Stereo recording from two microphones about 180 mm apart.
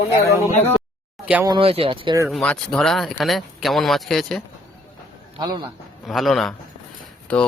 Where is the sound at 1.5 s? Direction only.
30° right (ahead or behind).